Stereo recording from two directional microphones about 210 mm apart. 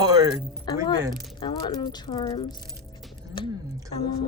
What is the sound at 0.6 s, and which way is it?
Speech, 20° left (ahead or behind).